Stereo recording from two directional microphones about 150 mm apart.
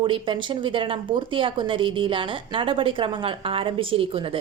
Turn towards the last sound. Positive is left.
turn(degrees=-35)  # may be behind; listen again after turning